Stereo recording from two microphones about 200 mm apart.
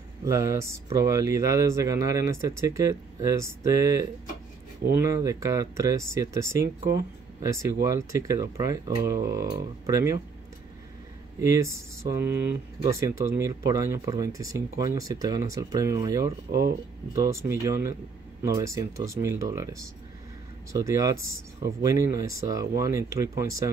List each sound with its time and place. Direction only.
0.2 s speech: 15° right (ahead or behind)
11.4 s speech: 15° right (ahead or behind)
20.7 s speech: 15° right (ahead or behind)